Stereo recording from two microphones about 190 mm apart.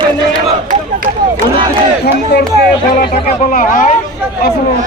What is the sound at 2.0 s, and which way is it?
Speech, 60° left (ahead or behind).